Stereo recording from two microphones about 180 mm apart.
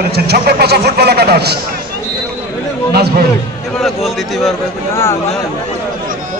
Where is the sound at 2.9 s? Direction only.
60° right (ahead or behind).